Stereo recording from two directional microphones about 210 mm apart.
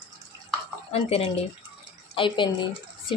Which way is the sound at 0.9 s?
30° left (ahead or behind).